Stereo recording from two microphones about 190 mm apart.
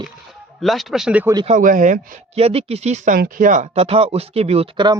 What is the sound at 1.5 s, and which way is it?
Speech, 45° right (ahead or behind).